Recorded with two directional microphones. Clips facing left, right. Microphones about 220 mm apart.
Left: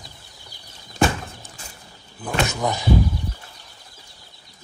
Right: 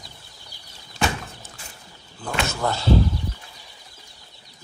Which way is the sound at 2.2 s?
15° left (ahead or behind).